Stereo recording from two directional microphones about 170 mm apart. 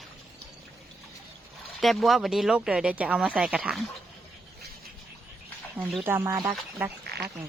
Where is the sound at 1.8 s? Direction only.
Centre (ahead or behind).